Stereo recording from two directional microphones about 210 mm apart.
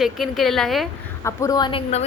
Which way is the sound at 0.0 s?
Centre (ahead or behind).